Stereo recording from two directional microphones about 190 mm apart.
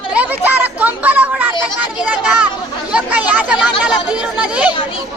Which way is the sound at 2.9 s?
10° right (ahead or behind).